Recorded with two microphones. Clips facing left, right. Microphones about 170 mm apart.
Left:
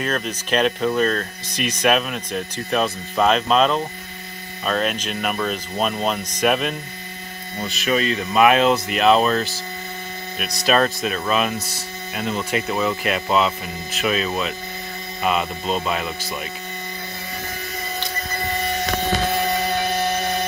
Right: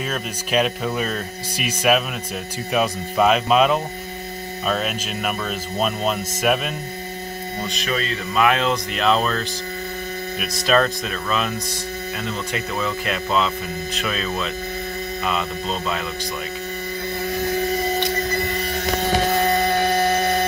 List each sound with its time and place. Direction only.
0.0 s speech: 5° right (ahead or behind)
7.9 s speech: 20° left (ahead or behind)
10.7 s speech: 10° left (ahead or behind)
12.8 s speech: 10° left (ahead or behind)